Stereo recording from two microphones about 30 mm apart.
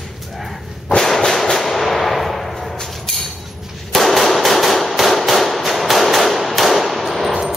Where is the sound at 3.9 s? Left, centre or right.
Centre.